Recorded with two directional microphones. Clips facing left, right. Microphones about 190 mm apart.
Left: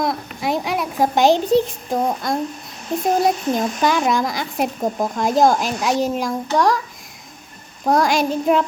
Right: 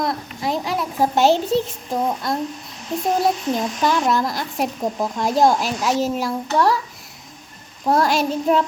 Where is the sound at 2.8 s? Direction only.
50° left (ahead or behind).